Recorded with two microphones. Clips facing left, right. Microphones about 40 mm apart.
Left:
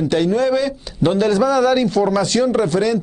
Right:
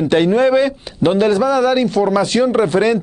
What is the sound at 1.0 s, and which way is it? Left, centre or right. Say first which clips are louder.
A man's voice: right 2 dB; centre.